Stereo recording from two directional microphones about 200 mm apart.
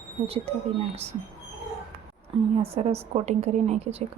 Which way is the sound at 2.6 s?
30° right (ahead or behind).